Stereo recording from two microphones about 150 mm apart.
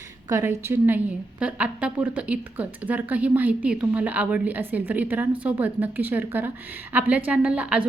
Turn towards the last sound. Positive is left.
turn(degrees=-10)  # may be behind; listen again after turning